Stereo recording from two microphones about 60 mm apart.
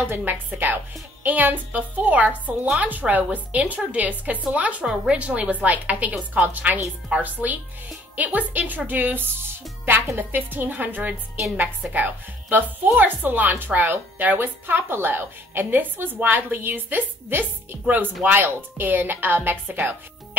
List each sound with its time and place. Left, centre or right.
0.1 s a woman's voice: right